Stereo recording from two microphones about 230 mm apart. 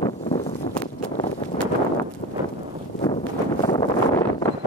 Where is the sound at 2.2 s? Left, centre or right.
Left.